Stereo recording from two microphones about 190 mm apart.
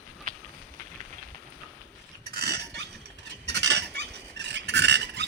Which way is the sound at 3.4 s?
65° right (ahead or behind).